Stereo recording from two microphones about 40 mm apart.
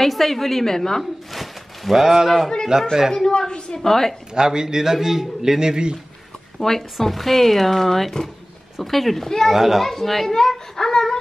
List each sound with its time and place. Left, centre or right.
0.0 s speech: centre
1.3 s a man's voice: centre
3.1 s speech: centre
3.3 s a woman's voice: left
3.8 s speech: centre
4.3 s a man's voice: centre
6.6 s speech: centre
9.5 s a child's voice: centre
9.8 s speech: centre